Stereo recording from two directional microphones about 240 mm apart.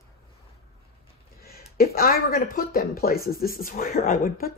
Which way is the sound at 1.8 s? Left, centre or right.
Left.